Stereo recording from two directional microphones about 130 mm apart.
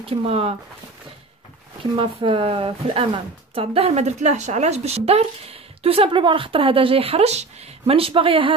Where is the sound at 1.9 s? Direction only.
45° right (ahead or behind).